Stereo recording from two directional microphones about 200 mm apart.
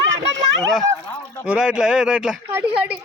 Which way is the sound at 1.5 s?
5° right (ahead or behind).